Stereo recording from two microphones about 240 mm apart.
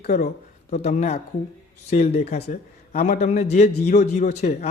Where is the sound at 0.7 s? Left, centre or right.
Left.